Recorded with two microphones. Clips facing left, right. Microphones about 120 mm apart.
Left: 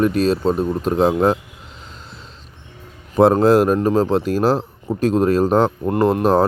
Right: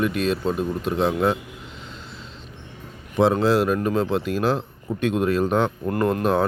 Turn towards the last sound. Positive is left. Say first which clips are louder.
# left 5 dB
turn(degrees=35)  # may be behind; listen again after turning